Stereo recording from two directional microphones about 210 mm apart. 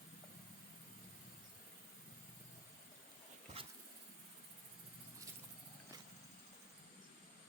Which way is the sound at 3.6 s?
25° right (ahead or behind).